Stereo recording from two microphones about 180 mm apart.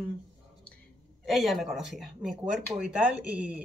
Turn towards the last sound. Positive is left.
turn(degrees=-5)  # may be behind; listen again after turning